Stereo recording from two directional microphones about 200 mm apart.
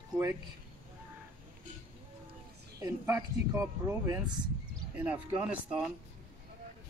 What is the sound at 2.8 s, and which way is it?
Speech, 15° right (ahead or behind).